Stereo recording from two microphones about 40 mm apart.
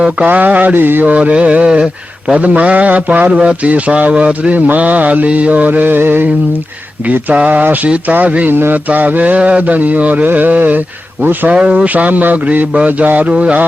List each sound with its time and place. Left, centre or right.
0.3 s mantra: right
1.0 s speech: right
4.5 s mantra: right
7.3 s speech: right
7.6 s mantra: right
8.0 s speech: right
8.4 s mantra: right
8.7 s speech: right
10.3 s mantra: right
11.5 s speech: right
11.9 s mantra: right
13.1 s speech: right